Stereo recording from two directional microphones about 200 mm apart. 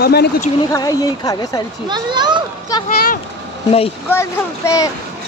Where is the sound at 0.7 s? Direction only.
15° left (ahead or behind).